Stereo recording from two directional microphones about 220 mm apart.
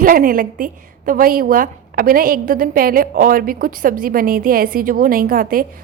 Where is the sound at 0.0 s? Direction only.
40° right (ahead or behind).